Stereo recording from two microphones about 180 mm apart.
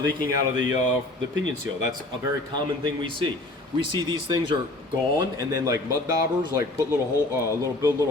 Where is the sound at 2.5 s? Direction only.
25° right (ahead or behind).